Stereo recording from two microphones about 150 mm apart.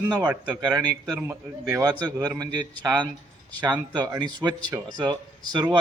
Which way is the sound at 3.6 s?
25° right (ahead or behind).